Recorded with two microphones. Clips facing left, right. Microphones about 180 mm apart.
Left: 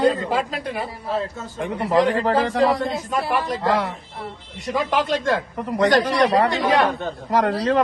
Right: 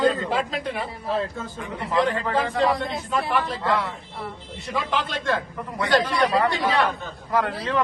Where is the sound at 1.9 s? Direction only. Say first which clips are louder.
Left 4 dB; 35° left (ahead or behind).